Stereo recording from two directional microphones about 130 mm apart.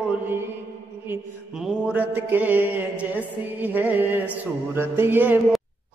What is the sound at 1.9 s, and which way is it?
Mantra, 15° right (ahead or behind).